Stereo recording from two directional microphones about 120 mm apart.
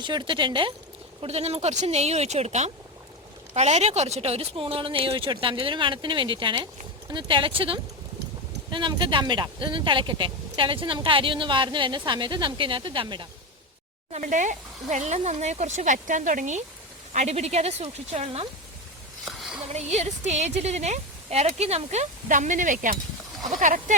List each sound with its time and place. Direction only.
0.0 s speech: 40° right (ahead or behind)
1.2 s speech: 60° right (ahead or behind); by 13.2 s 45° right (ahead or behind)
14.1 s speech: 85° right
17.1 s speech: 70° right (ahead or behind)
19.2 s a sound: centre (ahead or behind)
19.6 s a woman's voice: 65° right (ahead or behind); by 23.8 s 90° right